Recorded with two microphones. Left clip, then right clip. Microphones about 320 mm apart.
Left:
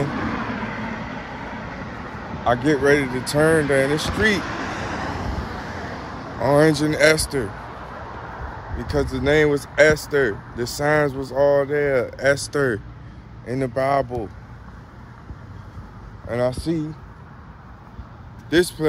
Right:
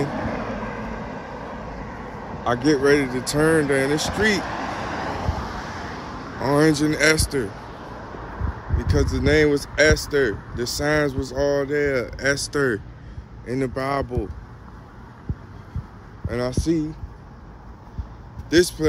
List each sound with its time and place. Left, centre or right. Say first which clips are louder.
0.0 s vehicle: left 1 dB; right
2.4 s speech: left 1 dB; centre
4.4 s vehicle: even; right; by 6.5 s centre
6.5 s speech: left 2 dB; centre
8.7 s speech: left 1 dB; centre
16.3 s speech: left 2 dB; centre
18.5 s speech: right 1 dB; centre